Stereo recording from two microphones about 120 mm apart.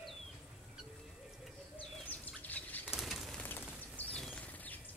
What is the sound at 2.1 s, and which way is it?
Bird, 15° left (ahead or behind).